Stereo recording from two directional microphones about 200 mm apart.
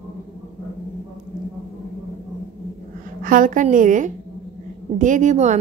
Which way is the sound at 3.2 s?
45° right (ahead or behind).